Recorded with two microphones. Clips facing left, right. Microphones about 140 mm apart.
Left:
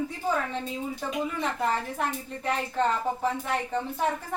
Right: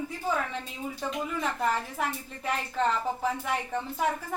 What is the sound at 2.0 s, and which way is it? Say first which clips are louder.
A woman's voice: left 2 dB; 5° right (ahead or behind).